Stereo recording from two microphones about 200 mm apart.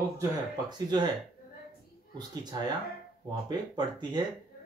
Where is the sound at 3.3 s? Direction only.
20° right (ahead or behind).